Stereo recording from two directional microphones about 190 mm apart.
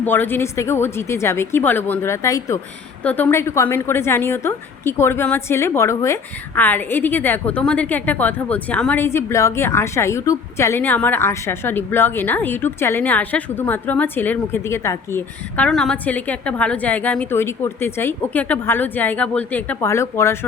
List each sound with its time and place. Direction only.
0.0 s a woman's voice: 10° left (ahead or behind)